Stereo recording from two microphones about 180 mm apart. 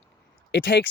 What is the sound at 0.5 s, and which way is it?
Speech, 85° left.